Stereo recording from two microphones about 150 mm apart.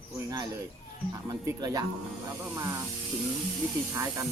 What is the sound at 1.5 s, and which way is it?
Speech, 25° right (ahead or behind).